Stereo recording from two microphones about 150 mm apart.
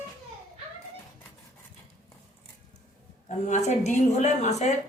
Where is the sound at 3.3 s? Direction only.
50° left (ahead or behind).